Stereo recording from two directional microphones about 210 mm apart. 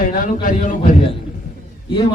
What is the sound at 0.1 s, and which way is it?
Speech, 40° left (ahead or behind).